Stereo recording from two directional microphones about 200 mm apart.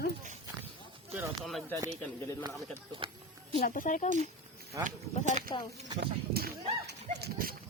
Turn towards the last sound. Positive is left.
turn(degrees=-50)  # may be behind; listen again after turning